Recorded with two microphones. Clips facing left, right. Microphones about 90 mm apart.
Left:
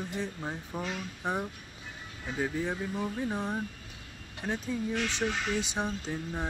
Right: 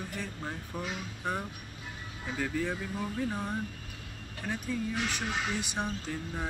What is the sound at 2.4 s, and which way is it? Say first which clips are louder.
Speech: left 1 dB; 20° left (ahead or behind).